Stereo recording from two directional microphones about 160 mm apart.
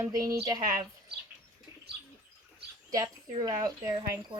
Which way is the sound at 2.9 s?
20° right (ahead or behind).